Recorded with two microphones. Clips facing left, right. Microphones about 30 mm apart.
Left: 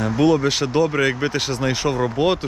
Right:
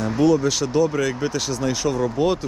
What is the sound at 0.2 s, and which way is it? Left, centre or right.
Speech, left.